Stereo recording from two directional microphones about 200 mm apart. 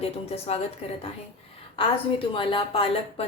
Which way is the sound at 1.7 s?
25° left (ahead or behind).